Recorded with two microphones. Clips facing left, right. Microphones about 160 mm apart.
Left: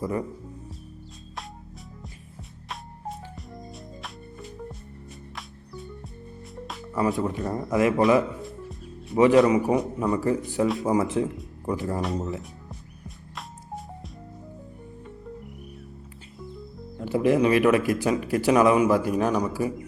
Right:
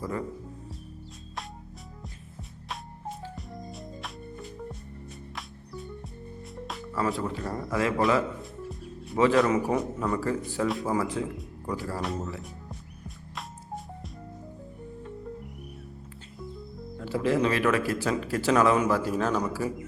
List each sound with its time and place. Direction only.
0.0 s a man's voice: 20° left (ahead or behind)
2.6 s music: centre (ahead or behind)
6.9 s a man's voice: 20° left (ahead or behind)
9.1 s a man's voice: 20° left (ahead or behind)
13.1 s music: centre (ahead or behind)
17.0 s a man's voice: 15° left (ahead or behind)